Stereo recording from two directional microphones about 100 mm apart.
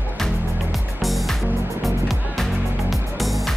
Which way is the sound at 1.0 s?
Centre (ahead or behind).